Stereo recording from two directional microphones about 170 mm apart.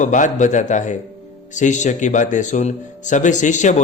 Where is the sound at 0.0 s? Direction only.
45° left (ahead or behind).